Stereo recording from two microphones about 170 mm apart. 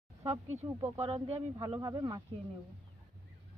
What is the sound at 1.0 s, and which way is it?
Speech, 40° right (ahead or behind).